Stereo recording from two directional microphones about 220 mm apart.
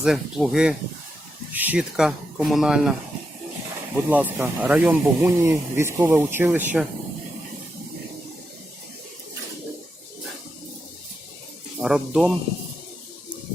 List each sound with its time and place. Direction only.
0.0 s speech: centre (ahead or behind)
3.9 s speech: 5° right (ahead or behind)
11.8 s speech: 5° right (ahead or behind)